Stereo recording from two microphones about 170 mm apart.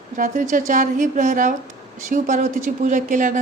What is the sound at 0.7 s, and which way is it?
Speech, 50° right (ahead or behind).